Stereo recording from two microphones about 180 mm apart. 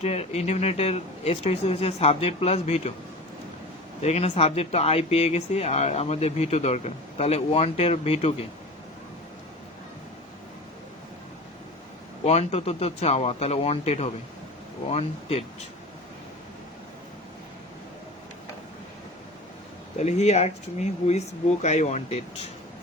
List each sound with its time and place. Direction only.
0.0 s speech: 35° left (ahead or behind)
4.0 s speech: 35° left (ahead or behind)
12.2 s speech: 35° left (ahead or behind)
20.0 s speech: 40° left (ahead or behind)